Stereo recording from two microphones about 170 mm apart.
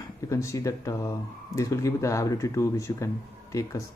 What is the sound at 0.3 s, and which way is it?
Speech, 20° left (ahead or behind).